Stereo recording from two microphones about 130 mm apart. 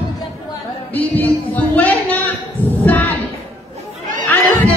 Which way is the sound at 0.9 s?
15° left (ahead or behind).